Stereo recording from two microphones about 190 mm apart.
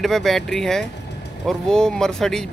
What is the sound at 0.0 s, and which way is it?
Speech, centre (ahead or behind).